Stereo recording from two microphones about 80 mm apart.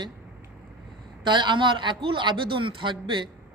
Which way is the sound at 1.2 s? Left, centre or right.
Right.